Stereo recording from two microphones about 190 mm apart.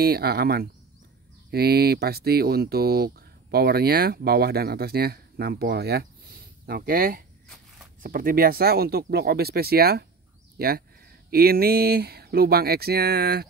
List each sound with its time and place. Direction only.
0.0 s speech: 55° right (ahead or behind)
7.4 s walk: centre (ahead or behind)
8.0 s speech: 50° right (ahead or behind)